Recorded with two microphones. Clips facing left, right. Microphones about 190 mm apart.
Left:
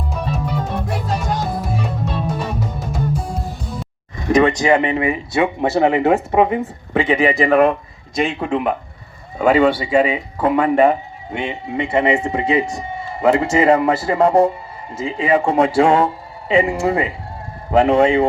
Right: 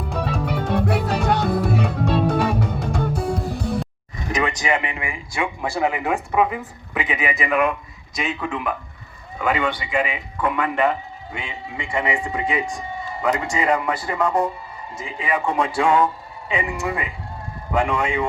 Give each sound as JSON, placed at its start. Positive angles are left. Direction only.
{"t": 0.2, "sound": "music", "side_deg": -65}
{"t": 4.3, "sound": "speech", "side_deg": 35}
{"t": 11.9, "sound": "speech", "side_deg": 25}